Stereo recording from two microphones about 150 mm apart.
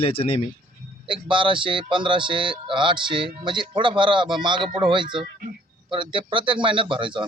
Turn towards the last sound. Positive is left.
turn(degrees=-35)  # may be behind; listen again after turning